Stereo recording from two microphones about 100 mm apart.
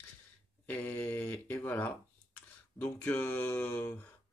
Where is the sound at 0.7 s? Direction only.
15° left (ahead or behind).